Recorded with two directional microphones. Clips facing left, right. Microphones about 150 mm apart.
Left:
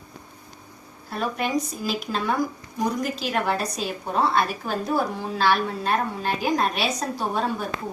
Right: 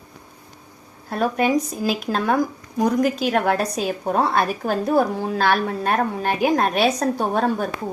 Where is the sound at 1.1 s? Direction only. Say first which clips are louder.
Right 6 dB; 45° right (ahead or behind).